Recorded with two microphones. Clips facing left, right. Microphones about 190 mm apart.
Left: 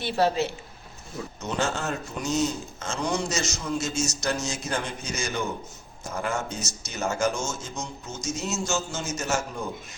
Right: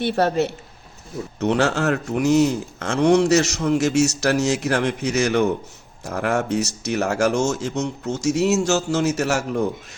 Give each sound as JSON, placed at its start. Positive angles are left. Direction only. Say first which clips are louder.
{"t": 0.0, "sound": "speech", "louder": "right 4 dB", "side_deg": -60}